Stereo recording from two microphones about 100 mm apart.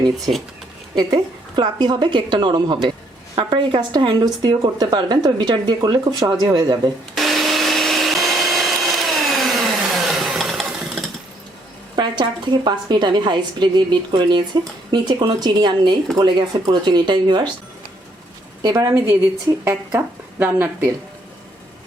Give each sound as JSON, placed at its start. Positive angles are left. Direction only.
{"t": 0.9, "sound": "a woman's voice", "side_deg": -45}
{"t": 7.2, "sound": "a sound", "side_deg": 0}
{"t": 11.9, "sound": "a woman's voice", "side_deg": -50}
{"t": 18.6, "sound": "a woman's voice", "side_deg": -40}